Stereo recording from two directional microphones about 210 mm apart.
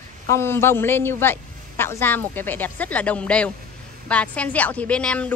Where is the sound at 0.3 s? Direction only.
10° left (ahead or behind).